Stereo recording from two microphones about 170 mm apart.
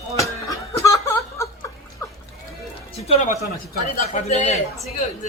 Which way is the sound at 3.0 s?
40° left (ahead or behind).